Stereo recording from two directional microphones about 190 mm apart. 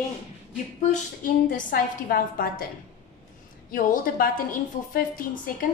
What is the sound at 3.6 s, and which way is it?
A woman's voice, 45° left (ahead or behind).